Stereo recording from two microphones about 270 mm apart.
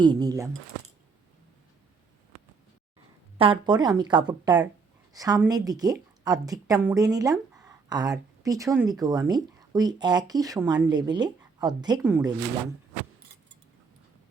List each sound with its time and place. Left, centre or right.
0.0 s speech: centre
3.3 s speech: centre